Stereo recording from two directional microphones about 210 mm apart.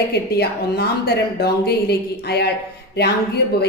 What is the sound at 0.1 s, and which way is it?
A woman's voice, 50° left (ahead or behind).